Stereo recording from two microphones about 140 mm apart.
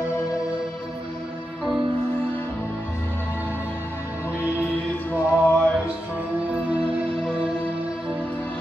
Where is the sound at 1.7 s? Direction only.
35° right (ahead or behind).